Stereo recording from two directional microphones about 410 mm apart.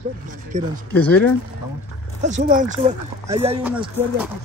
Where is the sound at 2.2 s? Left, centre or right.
Centre.